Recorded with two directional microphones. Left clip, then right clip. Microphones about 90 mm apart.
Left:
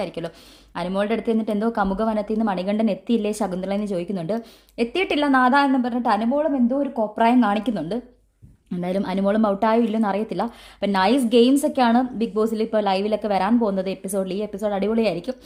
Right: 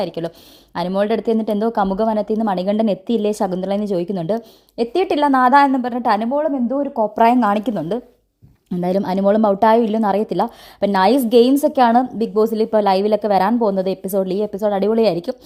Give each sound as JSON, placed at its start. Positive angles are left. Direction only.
{"t": 0.0, "sound": "a woman's voice", "side_deg": -45}
{"t": 4.4, "sound": "a woman's voice", "side_deg": -35}
{"t": 7.2, "sound": "a woman's voice", "side_deg": -55}